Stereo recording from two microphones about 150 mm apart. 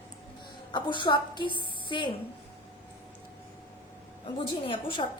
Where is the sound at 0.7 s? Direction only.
30° left (ahead or behind).